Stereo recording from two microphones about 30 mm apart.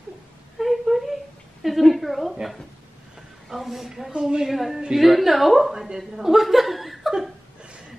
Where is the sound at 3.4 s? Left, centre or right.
Centre.